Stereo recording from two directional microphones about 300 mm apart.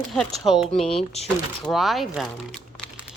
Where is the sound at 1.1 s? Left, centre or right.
Left.